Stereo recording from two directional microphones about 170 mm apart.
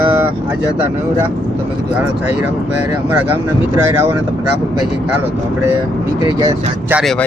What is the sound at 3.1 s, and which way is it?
Speech, 10° right (ahead or behind).